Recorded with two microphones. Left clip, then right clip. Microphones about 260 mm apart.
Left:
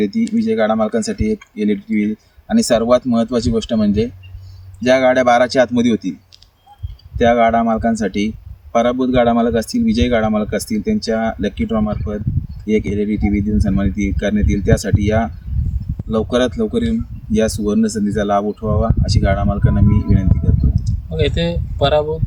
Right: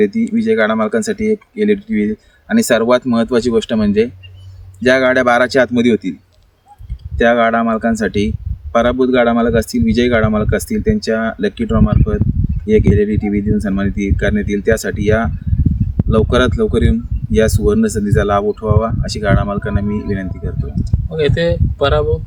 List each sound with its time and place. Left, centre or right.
0.0 s speech: centre
7.2 s speech: centre
19.9 s speech: right
20.8 s speech: centre